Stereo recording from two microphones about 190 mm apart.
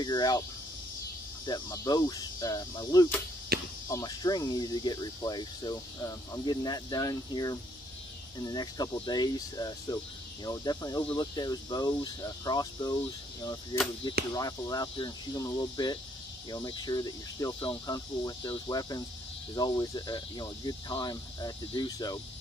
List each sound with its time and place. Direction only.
0.0 s speech: 20° left (ahead or behind)
1.4 s speech: 20° left (ahead or behind)
3.5 s cricket: 55° right (ahead or behind)
3.9 s speech: 20° left (ahead or behind)